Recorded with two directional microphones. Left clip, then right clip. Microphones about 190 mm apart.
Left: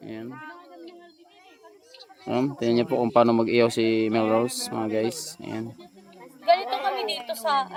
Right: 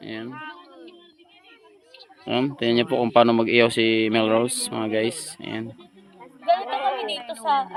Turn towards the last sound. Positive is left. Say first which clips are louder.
# right 2 dB
turn(degrees=15)  # may be behind; listen again after turning